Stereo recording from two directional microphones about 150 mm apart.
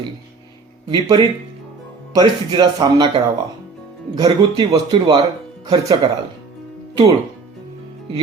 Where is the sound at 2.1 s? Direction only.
30° right (ahead or behind).